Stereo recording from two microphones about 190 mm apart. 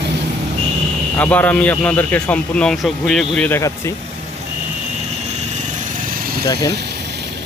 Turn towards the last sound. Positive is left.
turn(degrees=20)  # may be behind; listen again after turning